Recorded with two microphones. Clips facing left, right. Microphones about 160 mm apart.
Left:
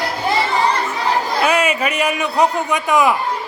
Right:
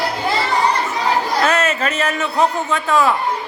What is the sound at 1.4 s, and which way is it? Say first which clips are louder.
A man's voice: left 1 dB; 10° left (ahead or behind).